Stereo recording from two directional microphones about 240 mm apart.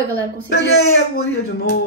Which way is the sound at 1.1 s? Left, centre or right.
Left.